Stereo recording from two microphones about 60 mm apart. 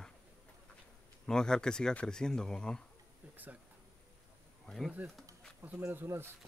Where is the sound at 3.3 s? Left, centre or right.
Right.